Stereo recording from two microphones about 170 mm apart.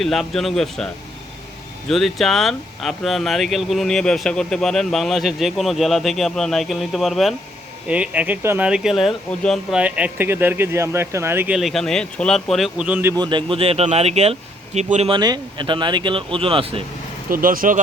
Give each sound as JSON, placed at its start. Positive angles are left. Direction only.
{"t": 0.0, "sound": "speech", "side_deg": 0}
{"t": 1.9, "sound": "speech", "side_deg": 0}
{"t": 13.1, "sound": "speech", "side_deg": -30}
{"t": 17.2, "sound": "speech", "side_deg": -55}